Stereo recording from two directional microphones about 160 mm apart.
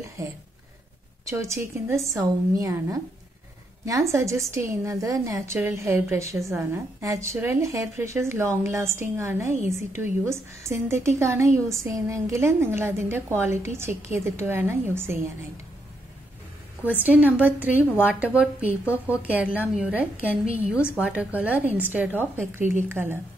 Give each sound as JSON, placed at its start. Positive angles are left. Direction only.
{"t": 1.2, "sound": "a woman's voice", "side_deg": -20}
{"t": 17.0, "sound": "a woman's voice", "side_deg": -10}
{"t": 20.4, "sound": "a woman's voice", "side_deg": -40}
{"t": 21.0, "sound": "a woman's voice", "side_deg": -10}